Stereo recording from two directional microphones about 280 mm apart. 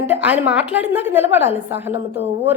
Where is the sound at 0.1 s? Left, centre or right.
Centre.